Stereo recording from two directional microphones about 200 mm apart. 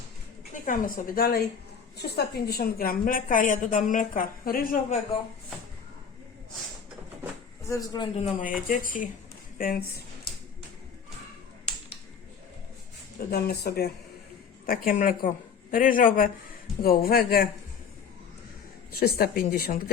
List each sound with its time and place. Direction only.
0.6 s a woman's voice: 40° left (ahead or behind)
7.7 s a man's voice: 20° left (ahead or behind)
8.2 s a woman's voice: 40° left (ahead or behind)
13.1 s a woman's voice: 50° left (ahead or behind)
18.9 s a woman's voice: 50° left (ahead or behind)